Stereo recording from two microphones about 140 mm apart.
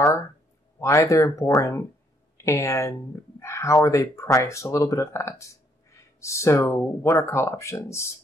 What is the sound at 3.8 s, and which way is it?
Speech, 20° left (ahead or behind).